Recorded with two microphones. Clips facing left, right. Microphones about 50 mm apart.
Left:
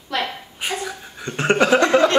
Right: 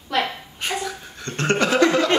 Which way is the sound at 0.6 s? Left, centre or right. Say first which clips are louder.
Even; centre.